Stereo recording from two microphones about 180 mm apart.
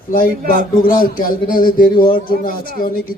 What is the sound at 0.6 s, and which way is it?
Speech, 55° left (ahead or behind).